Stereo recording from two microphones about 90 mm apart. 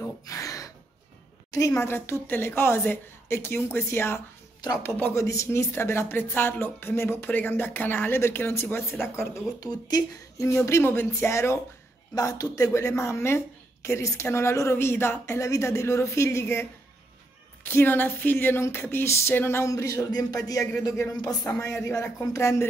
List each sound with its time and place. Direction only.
0.0 s gasp: 35° left (ahead or behind)
1.8 s a woman's voice: 25° left (ahead or behind)
5.1 s a woman's voice: 35° left (ahead or behind)
9.6 s speech: 50° left (ahead or behind)
10.4 s a woman's voice: 30° left (ahead or behind)
12.2 s a woman's voice: 40° left (ahead or behind)
17.6 s a woman's voice: 25° left (ahead or behind)
21.1 s a woman's voice: 45° left (ahead or behind)